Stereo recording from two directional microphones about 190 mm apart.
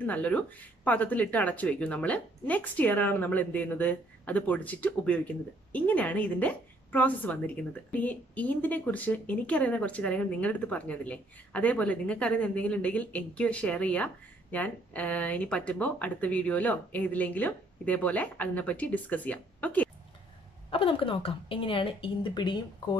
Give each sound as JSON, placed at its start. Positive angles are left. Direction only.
{"t": 0.0, "sound": "a woman's voice", "side_deg": 5}
{"t": 20.7, "sound": "a woman's voice", "side_deg": 30}